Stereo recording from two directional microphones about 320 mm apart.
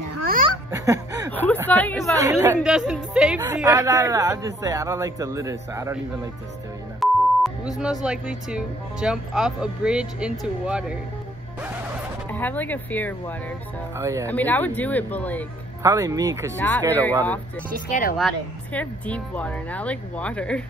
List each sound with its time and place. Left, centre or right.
0.7 s snicker: centre
1.3 s speech: centre
2.1 s a woman's voice: centre
7.0 s speech: centre
12.3 s speech: centre
13.9 s a woman's voice: centre
14.2 s speech: centre
15.8 s a woman's voice: centre
16.5 s speech: centre
17.8 s speech: left
18.1 s speech: centre